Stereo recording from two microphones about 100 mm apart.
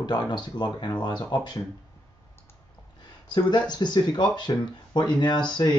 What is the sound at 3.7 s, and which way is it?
Speech, 45° left (ahead or behind).